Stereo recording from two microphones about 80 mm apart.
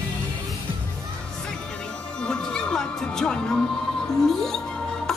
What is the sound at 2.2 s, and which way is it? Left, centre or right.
Music, centre.